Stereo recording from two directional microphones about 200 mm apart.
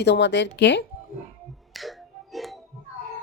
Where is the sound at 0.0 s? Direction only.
60° left (ahead or behind).